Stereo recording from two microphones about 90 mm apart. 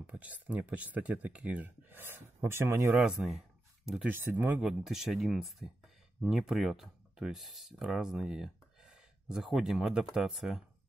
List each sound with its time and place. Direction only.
0.1 s speech: 15° right (ahead or behind)
2.9 s speech: 5° right (ahead or behind)
4.0 s speech: 20° right (ahead or behind)
4.6 s speech: 5° right (ahead or behind)